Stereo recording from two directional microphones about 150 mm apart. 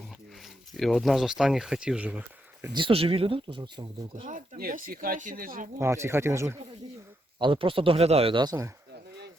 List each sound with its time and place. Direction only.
0.7 s speech: centre (ahead or behind)
2.7 s speech: 35° right (ahead or behind)
4.3 s speech: 70° right (ahead or behind)
5.8 s speech: 20° right (ahead or behind)
7.3 s speech: 35° right (ahead or behind)